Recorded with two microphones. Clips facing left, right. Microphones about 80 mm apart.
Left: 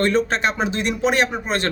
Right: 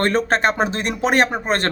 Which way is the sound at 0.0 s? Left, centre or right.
Right.